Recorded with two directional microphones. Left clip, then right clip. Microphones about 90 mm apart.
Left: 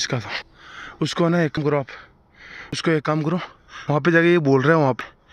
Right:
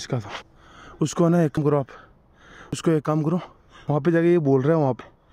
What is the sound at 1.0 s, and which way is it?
Speech, 70° right (ahead or behind).